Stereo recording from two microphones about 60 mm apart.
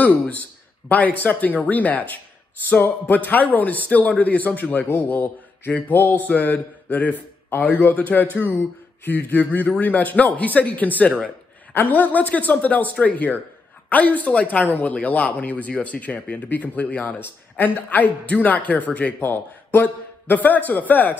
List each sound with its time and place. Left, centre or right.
0.0 s speech: left